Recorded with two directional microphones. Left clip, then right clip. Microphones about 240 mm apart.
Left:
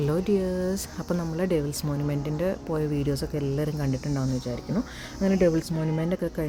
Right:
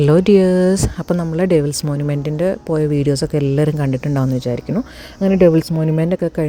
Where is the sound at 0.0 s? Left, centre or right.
Right.